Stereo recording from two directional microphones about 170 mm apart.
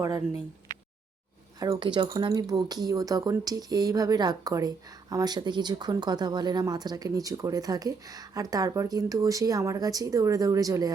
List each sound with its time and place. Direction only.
1.5 s speech: 25° right (ahead or behind)